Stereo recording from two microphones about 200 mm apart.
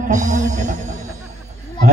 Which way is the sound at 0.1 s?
40° right (ahead or behind).